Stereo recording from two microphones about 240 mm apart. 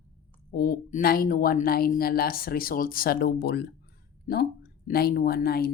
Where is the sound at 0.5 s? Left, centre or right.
Left.